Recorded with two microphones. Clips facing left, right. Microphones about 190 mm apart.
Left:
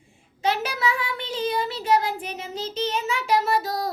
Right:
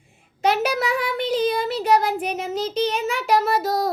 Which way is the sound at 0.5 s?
75° right (ahead or behind).